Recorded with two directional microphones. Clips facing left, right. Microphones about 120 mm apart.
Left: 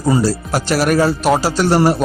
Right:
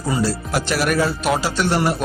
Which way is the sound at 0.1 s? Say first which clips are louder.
Left 5 dB; 40° left (ahead or behind).